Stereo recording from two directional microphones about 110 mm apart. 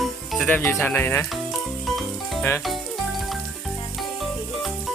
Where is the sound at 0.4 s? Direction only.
15° left (ahead or behind).